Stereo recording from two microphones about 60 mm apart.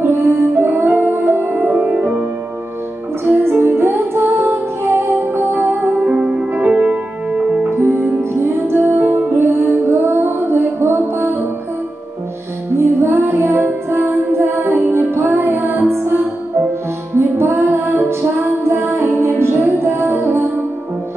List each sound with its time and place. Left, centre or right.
0.3 s music: right
1.8 s music: right
3.3 s music: right
5.9 s music: centre
7.7 s music: right
12.7 s music: right